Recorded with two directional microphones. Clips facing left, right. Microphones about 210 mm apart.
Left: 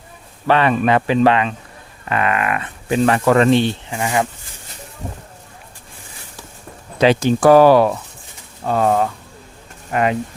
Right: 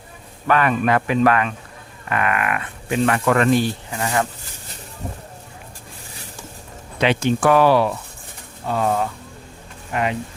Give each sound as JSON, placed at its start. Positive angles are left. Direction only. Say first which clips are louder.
{"t": 0.4, "sound": "speech", "louder": "left 3 dB", "side_deg": 30}
{"t": 4.0, "sound": "speech", "louder": "left 2 dB", "side_deg": 15}
{"t": 7.0, "sound": "speech", "louder": "left 5 dB", "side_deg": 35}